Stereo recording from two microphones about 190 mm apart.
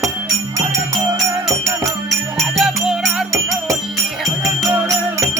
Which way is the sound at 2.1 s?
Centre (ahead or behind).